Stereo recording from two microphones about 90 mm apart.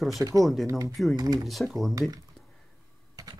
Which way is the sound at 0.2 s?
40° right (ahead or behind).